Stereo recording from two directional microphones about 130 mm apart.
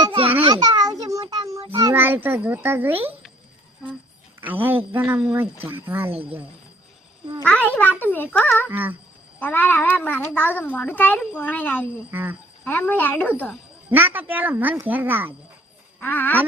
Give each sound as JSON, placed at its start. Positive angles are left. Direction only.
{"t": 0.1, "sound": "a sound", "side_deg": -45}
{"t": 0.4, "sound": "music", "side_deg": -35}
{"t": 1.8, "sound": "a child's voice", "side_deg": -15}
{"t": 4.4, "sound": "a child's voice", "side_deg": -15}
{"t": 5.0, "sound": "speech", "side_deg": -5}
{"t": 5.3, "sound": "a child's voice", "side_deg": -20}
{"t": 7.4, "sound": "a child's voice", "side_deg": 10}
{"t": 8.7, "sound": "a child's voice", "side_deg": -15}
{"t": 9.4, "sound": "a child's voice", "side_deg": 15}
{"t": 12.1, "sound": "a child's voice", "side_deg": -15}
{"t": 12.6, "sound": "a child's voice", "side_deg": 15}
{"t": 13.9, "sound": "a child's voice", "side_deg": -15}
{"t": 16.0, "sound": "speech", "side_deg": 15}